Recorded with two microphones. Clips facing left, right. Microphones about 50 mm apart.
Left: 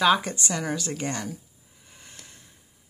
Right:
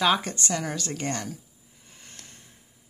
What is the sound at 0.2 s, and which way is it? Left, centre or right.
Speech, centre.